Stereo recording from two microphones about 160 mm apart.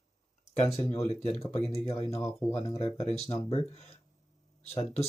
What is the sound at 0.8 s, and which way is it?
Speech, 40° left (ahead or behind).